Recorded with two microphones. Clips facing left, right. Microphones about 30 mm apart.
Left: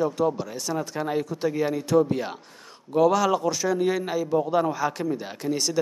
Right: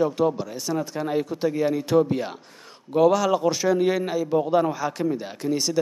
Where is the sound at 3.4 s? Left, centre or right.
Right; by 5.8 s centre.